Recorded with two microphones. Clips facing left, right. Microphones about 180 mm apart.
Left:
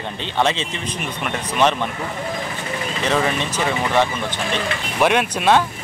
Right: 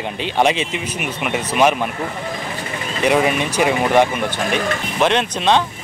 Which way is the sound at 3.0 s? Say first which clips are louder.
Right 5 dB; 15° right (ahead or behind).